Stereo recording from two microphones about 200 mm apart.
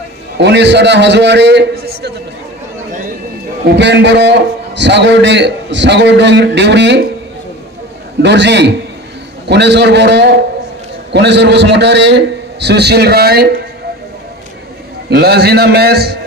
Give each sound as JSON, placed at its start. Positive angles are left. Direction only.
{"t": 0.4, "sound": "a man's voice", "side_deg": -60}
{"t": 3.6, "sound": "a man's voice", "side_deg": -60}
{"t": 8.2, "sound": "a man's voice", "side_deg": -60}
{"t": 15.0, "sound": "a man's voice", "side_deg": -55}